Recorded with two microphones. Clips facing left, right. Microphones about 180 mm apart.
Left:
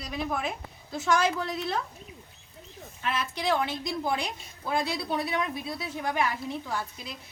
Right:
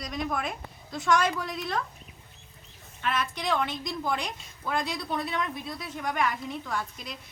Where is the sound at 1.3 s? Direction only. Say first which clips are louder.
Left 2 dB; 25° left (ahead or behind).